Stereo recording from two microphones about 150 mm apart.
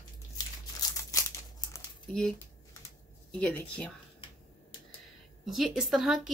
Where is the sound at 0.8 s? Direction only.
25° left (ahead or behind).